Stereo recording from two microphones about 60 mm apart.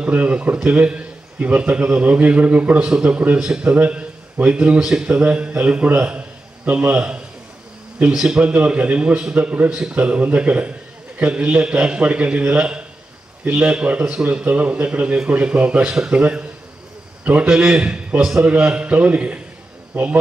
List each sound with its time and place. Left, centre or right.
0.0 s a man's voice: right
3.3 s a man's voice: centre
9.7 s a man's voice: centre
9.9 s a man's voice: right